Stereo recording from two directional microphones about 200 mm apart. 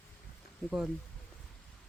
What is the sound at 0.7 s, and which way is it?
Speech, 5° right (ahead or behind).